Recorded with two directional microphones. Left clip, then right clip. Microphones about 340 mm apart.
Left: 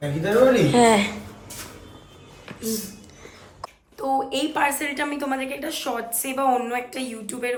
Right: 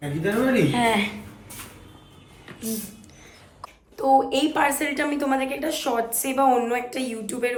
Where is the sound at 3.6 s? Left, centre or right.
Centre.